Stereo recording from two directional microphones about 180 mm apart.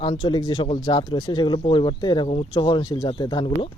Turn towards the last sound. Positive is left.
turn(degrees=25)  # may be behind; listen again after turning